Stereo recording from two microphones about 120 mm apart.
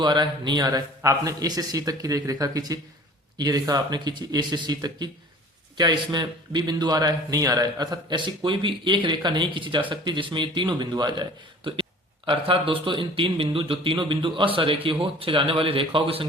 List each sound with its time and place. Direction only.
0.0 s a man's voice: 40° right (ahead or behind)